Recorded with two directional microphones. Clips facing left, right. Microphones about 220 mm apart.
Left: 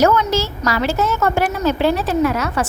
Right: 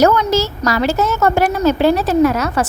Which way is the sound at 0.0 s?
40° right (ahead or behind).